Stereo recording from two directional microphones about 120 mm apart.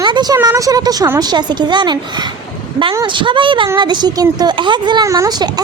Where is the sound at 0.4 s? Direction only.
30° right (ahead or behind).